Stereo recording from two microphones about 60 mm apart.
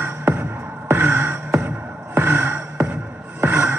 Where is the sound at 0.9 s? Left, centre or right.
Right.